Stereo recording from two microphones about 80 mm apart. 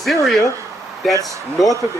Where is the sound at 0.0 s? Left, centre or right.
Centre.